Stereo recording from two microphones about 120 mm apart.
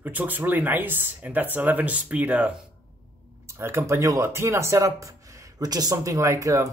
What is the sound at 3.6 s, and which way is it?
Speech, 20° right (ahead or behind).